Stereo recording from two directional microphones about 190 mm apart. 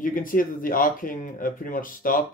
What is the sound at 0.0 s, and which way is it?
Speech, 45° left (ahead or behind).